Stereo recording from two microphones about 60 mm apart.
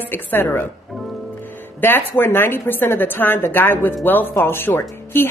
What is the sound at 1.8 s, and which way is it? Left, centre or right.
A woman's voice, left.